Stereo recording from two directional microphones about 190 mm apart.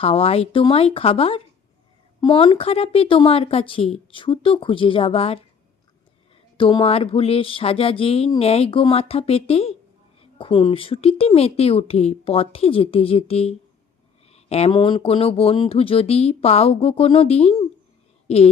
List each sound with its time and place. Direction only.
0.0 s speech: 30° left (ahead or behind)
6.6 s a woman's voice: 25° left (ahead or behind)